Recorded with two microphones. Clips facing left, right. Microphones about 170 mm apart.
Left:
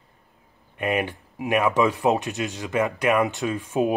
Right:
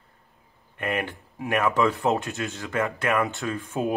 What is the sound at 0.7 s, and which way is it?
Speech, 15° left (ahead or behind).